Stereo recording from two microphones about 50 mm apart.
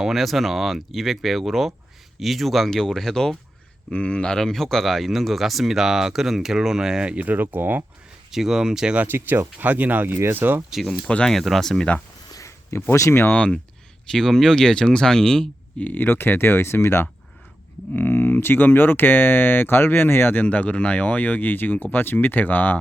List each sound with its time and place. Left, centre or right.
0.0 s speech: centre
3.9 s speech: left; by 7.0 s centre
7.0 s speech: centre
7.3 s speech: right
8.3 s speech: centre
9.0 s speech: right
11.3 s speech: centre
12.4 s a sound: left
13.1 s speech: left
13.3 s speech: left
14.1 s speech: centre
15.8 s speech: left
17.9 s speech: left
20.4 s speech: left